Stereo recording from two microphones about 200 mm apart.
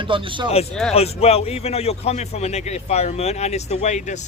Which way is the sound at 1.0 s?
30° left (ahead or behind).